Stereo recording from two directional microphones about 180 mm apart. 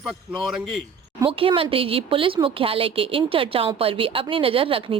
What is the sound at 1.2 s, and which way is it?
A woman's voice, 30° right (ahead or behind).